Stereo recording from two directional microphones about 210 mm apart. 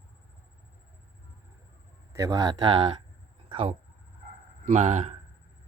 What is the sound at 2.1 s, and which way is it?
Speech, 15° right (ahead or behind).